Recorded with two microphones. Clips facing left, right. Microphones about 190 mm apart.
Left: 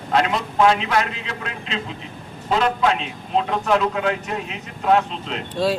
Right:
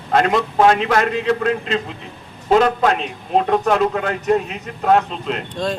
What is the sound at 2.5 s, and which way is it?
A man's voice, 45° right (ahead or behind).